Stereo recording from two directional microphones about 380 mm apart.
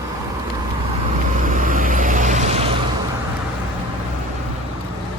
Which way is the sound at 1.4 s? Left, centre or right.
Right.